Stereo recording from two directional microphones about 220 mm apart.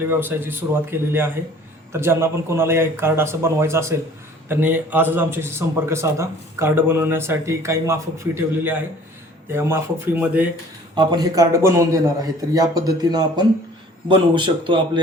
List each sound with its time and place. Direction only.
0.2 s a man's voice: 10° right (ahead or behind)
10.9 s a man's voice: 20° right (ahead or behind)